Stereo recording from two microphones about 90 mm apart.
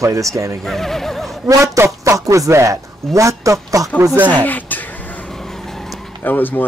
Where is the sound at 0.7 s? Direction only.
5° left (ahead or behind).